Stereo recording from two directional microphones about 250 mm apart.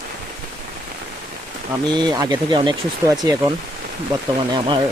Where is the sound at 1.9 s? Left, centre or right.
Centre.